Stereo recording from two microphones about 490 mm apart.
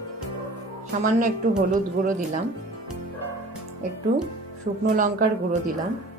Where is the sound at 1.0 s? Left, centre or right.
Centre.